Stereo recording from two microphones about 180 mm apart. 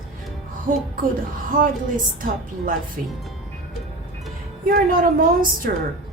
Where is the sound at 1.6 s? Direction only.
50° right (ahead or behind).